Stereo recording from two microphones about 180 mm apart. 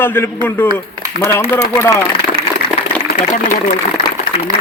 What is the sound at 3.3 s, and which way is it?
Speech, 40° left (ahead or behind).